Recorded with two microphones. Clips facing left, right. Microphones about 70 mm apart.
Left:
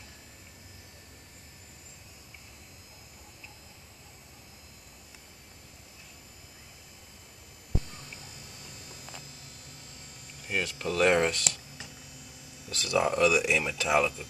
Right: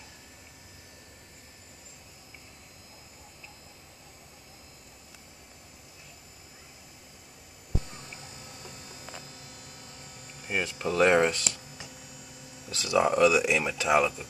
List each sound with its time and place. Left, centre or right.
10.4 s speech: centre